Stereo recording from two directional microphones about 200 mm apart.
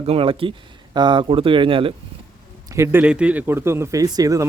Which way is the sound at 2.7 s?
10° right (ahead or behind).